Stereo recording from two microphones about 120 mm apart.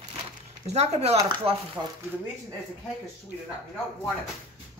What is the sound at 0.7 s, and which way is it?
Speech, 60° right (ahead or behind).